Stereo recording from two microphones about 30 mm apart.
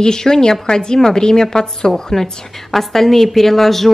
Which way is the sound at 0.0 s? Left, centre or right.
Left.